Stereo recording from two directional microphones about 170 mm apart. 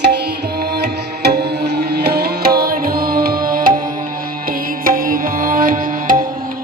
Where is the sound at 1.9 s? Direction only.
70° right (ahead or behind).